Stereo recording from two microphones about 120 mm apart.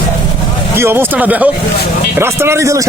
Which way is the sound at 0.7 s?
20° right (ahead or behind).